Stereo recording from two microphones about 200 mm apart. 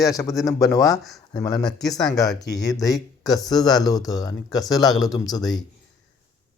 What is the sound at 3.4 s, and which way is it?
Speech, 20° left (ahead or behind).